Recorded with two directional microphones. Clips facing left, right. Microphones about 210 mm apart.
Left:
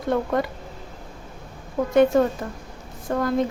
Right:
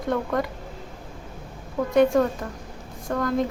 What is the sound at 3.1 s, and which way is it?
Speech, 25° left (ahead or behind).